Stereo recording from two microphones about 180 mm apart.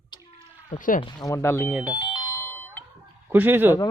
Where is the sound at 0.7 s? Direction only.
45° left (ahead or behind).